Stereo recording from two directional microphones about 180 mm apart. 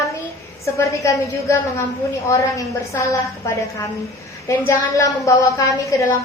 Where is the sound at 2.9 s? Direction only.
15° left (ahead or behind).